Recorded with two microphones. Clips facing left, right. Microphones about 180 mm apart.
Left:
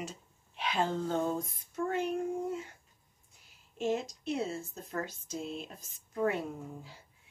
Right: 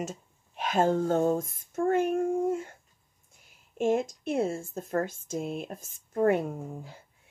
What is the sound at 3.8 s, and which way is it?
Speech, 50° right (ahead or behind).